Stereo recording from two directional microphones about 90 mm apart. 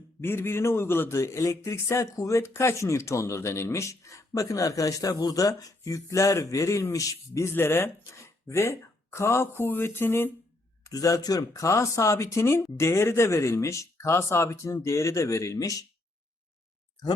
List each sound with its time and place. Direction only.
0.2 s a man's voice: 25° left (ahead or behind)
10.8 s a man's voice: 40° left (ahead or behind)